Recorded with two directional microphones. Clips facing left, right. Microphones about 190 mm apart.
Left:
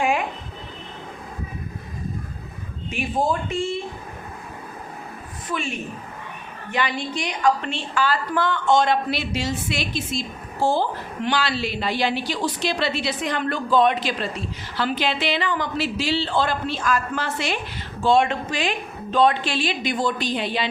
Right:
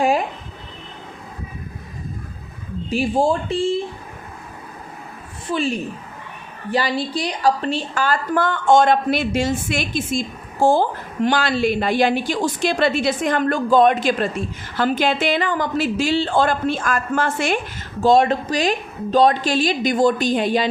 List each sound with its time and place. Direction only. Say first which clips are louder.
0.0 s a sound: right 4 dB; 35° right (ahead or behind)
2.9 s a woman's voice: right 5 dB; 30° right (ahead or behind)
5.5 s a woman's voice: right 6 dB; 35° right (ahead or behind)